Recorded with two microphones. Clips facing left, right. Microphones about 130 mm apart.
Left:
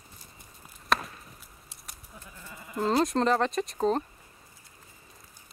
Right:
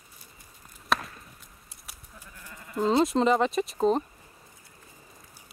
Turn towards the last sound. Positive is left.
turn(degrees=0)  # may be behind; listen again after turning